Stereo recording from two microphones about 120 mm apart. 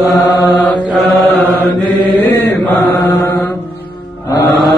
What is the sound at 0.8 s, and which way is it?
Mantra, centre (ahead or behind).